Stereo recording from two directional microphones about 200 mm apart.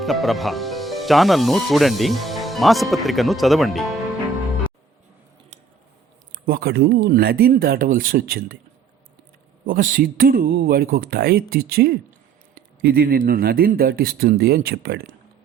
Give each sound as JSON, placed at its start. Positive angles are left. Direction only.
{"t": 0.0, "sound": "speech", "side_deg": 0}
{"t": 6.4, "sound": "speech", "side_deg": -50}
{"t": 9.6, "sound": "speech", "side_deg": -45}